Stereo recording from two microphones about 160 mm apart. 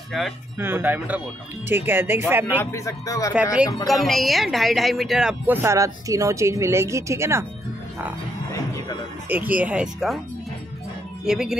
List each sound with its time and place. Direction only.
0.1 s speech: centre (ahead or behind)
0.6 s speech: 15° right (ahead or behind)
2.6 s speech: 15° left (ahead or behind)
3.5 s speech: centre (ahead or behind)
5.5 s speech: 15° right (ahead or behind)
9.3 s speech: 10° right (ahead or behind)
11.2 s speech: 5° right (ahead or behind)